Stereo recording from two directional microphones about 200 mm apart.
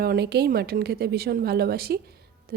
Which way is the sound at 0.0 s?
50° right (ahead or behind).